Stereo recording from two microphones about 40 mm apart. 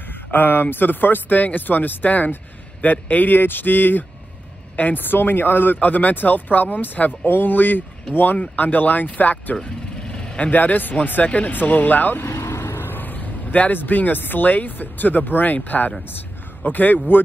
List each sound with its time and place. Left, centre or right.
0.3 s speech: left
5.8 s speech: left
9.6 s vehicle: left
10.4 s speech: left
11.2 s speech: left
11.5 s speech: left
12.3 s vehicle: left
13.7 s speech: left